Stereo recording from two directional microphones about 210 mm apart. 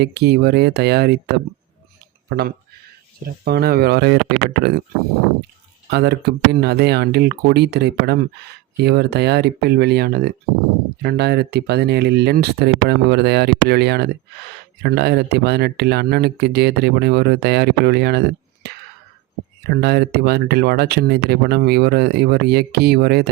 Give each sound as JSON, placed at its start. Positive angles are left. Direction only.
{"t": 0.0, "sound": "speech", "side_deg": -50}
{"t": 3.2, "sound": "speech", "side_deg": -50}
{"t": 5.9, "sound": "speech", "side_deg": -50}
{"t": 18.6, "sound": "whispering", "side_deg": -50}
{"t": 19.6, "sound": "speech", "side_deg": -50}